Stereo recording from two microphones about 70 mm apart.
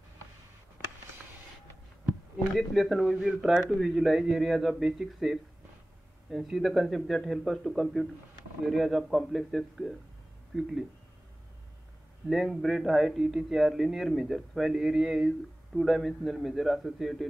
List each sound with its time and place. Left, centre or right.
2.5 s a man's voice: centre
12.3 s a man's voice: centre